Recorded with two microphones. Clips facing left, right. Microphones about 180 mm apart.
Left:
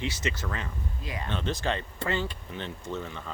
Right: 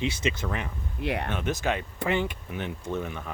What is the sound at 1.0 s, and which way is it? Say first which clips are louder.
Speech: right 10 dB; 70° right (ahead or behind).